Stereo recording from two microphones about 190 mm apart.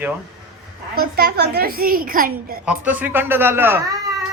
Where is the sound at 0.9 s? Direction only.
55° right (ahead or behind).